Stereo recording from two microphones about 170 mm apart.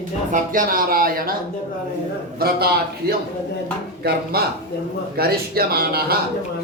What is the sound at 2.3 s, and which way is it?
Speech, 65° right (ahead or behind).